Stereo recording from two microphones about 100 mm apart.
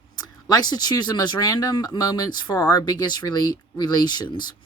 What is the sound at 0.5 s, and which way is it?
Speech, 45° left (ahead or behind).